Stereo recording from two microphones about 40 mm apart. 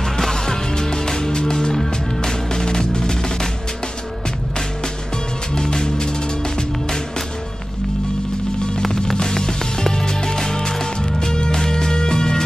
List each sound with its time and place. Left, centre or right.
0.0 s music: centre
4.6 s music: centre
8.8 s music: centre